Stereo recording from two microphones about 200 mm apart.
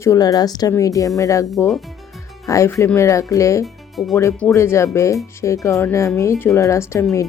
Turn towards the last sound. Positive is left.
turn(degrees=15)  # may be behind; listen again after turning